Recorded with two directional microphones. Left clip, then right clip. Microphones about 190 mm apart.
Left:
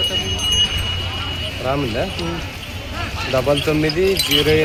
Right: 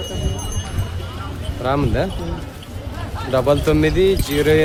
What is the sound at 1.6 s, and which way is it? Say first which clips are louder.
Speech: right 2 dB; 20° right (ahead or behind).